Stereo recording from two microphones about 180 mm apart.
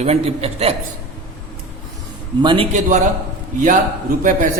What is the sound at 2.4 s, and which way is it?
Speech, 25° right (ahead or behind).